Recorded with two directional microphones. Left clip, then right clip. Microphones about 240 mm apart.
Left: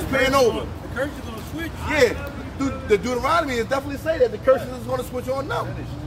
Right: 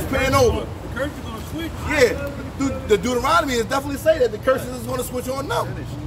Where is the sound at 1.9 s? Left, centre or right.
Centre.